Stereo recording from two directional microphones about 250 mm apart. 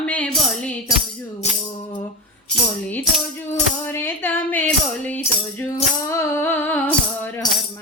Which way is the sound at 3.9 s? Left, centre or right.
Centre.